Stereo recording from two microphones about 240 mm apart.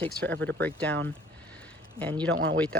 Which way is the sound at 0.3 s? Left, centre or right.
Centre.